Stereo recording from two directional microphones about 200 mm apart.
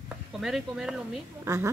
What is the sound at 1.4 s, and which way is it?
Speech, 15° right (ahead or behind).